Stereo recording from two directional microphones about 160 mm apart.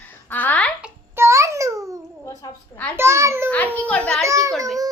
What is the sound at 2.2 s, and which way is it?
Speech, 20° left (ahead or behind).